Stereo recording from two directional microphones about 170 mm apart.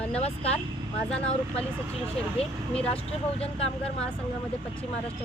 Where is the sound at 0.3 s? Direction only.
35° left (ahead or behind).